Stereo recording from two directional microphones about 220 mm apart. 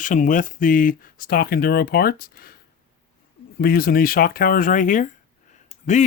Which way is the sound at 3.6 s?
40° left (ahead or behind).